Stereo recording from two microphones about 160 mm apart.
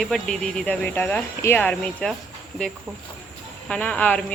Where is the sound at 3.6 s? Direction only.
5° left (ahead or behind).